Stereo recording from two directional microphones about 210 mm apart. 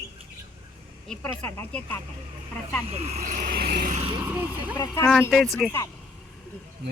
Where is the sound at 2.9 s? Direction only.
30° right (ahead or behind).